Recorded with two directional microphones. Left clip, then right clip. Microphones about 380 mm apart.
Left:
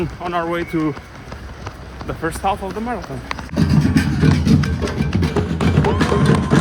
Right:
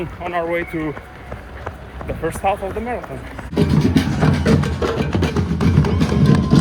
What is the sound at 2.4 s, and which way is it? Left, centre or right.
Speech, centre.